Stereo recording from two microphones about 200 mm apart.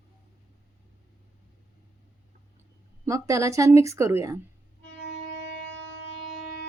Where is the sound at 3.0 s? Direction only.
15° right (ahead or behind).